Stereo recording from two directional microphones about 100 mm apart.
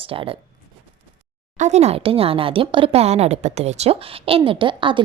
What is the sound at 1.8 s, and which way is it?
A woman's voice, 80° right.